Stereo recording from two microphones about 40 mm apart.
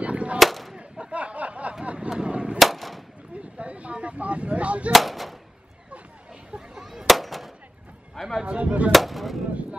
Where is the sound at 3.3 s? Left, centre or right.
Right.